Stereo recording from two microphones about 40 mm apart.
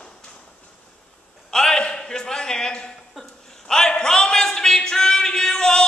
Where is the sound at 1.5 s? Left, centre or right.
Centre.